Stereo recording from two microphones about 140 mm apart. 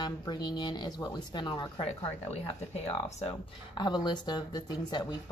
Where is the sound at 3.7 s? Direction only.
30° left (ahead or behind).